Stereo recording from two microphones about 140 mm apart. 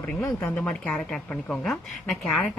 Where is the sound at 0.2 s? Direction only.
20° left (ahead or behind).